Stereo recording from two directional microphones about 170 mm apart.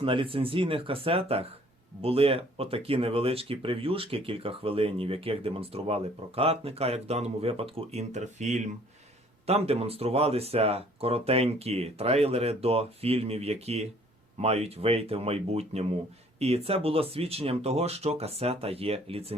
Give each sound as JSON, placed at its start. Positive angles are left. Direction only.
{"t": 0.0, "sound": "speech", "side_deg": -30}